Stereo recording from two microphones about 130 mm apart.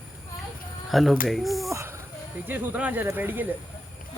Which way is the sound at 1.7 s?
20° right (ahead or behind).